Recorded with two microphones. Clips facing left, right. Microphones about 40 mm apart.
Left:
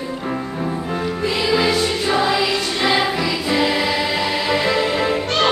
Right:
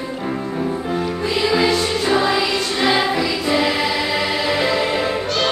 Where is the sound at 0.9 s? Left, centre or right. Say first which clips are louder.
Even; centre.